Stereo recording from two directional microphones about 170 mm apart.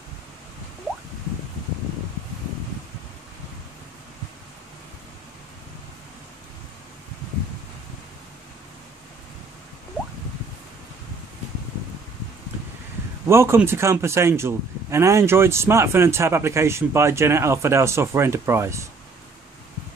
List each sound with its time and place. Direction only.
13.3 s a man's voice: 15° right (ahead or behind)